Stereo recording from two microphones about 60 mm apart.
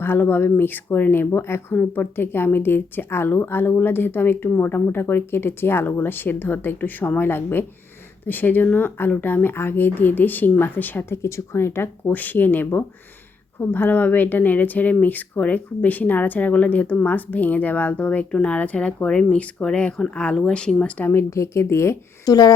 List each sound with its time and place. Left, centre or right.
0.0 s speech: left
1.3 s a woman's voice: left
1.7 s speech: left
11.2 s speech: left; by 20.9 s centre
21.0 s speech: left
21.2 s a woman's voice: left
22.3 s speech: left